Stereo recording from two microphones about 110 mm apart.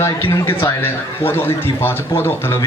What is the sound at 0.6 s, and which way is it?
A man's voice, 20° left (ahead or behind).